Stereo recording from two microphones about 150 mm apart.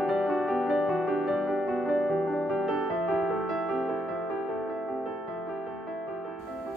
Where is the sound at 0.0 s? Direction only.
Centre (ahead or behind).